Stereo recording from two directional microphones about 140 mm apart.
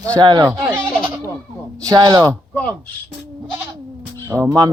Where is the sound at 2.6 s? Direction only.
10° left (ahead or behind).